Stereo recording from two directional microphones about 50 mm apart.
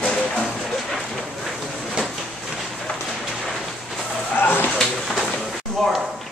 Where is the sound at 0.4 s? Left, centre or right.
Centre.